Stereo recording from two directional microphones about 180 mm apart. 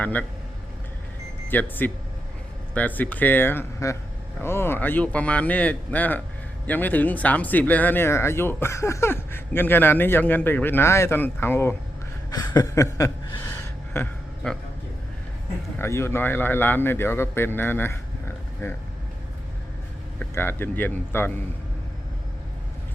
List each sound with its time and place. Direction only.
0.0 s speech: 10° left (ahead or behind)
1.5 s speech: 10° left (ahead or behind)
12.3 s a sound: 20° left (ahead or behind)
15.8 s speech: 15° left (ahead or behind)
20.1 s speech: 10° left (ahead or behind)